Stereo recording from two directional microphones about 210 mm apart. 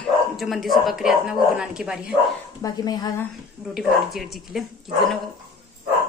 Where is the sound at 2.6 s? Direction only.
20° left (ahead or behind).